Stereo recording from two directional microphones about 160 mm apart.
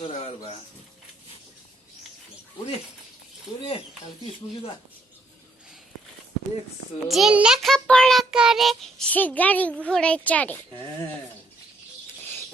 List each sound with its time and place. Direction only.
0.0 s speech: 40° left (ahead or behind)
3.6 s speech: 40° left (ahead or behind)
7.1 s child singing: 5° right (ahead or behind)